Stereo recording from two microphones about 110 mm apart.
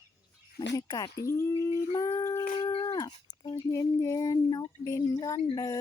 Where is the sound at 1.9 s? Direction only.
40° left (ahead or behind).